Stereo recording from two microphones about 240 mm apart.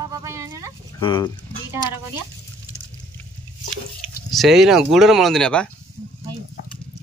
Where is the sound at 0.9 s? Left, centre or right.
Centre.